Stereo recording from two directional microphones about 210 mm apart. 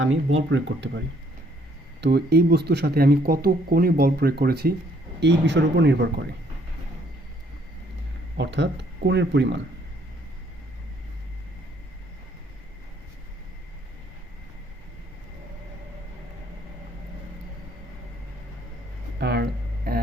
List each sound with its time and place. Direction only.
0.0 s speech: 70° right (ahead or behind)
2.0 s speech: 50° right (ahead or behind)
8.4 s speech: 55° right (ahead or behind)
19.2 s a sound: 50° right (ahead or behind)